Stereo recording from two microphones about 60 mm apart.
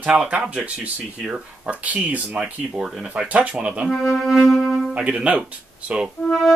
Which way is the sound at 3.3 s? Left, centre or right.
Right.